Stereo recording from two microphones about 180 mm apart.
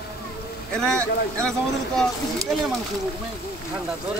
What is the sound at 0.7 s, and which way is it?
Speech, 5° left (ahead or behind).